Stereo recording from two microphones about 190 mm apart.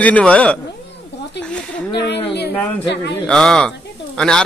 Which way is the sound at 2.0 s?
60° left (ahead or behind).